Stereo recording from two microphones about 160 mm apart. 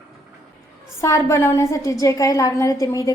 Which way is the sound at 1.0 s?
20° left (ahead or behind).